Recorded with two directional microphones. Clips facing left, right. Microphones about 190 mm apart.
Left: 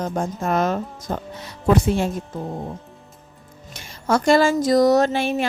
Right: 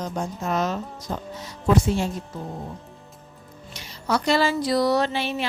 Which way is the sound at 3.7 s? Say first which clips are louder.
Left 4 dB; 50° left (ahead or behind).